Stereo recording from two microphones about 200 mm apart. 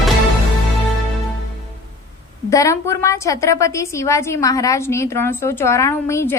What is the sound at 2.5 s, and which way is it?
A woman's voice, 15° left (ahead or behind).